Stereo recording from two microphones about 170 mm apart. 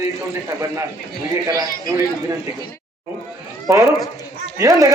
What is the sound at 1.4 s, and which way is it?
Speech, 20° right (ahead or behind).